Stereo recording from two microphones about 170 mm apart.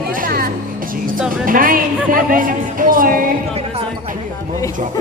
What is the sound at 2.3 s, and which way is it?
Music, 55° right (ahead or behind).